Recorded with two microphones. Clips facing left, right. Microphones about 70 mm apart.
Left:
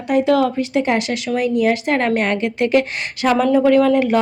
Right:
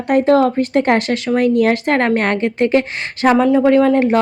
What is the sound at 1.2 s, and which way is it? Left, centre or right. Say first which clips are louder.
Speech: right 5 dB; right.